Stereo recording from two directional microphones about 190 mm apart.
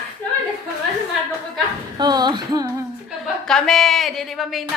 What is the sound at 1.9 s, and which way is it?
Music, 20° right (ahead or behind).